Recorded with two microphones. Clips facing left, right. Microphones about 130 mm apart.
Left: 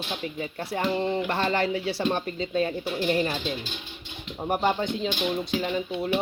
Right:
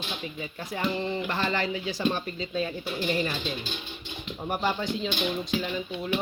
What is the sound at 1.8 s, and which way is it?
Speech, 65° left (ahead or behind).